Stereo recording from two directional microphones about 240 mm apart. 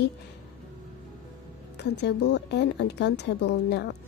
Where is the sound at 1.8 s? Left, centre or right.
Left.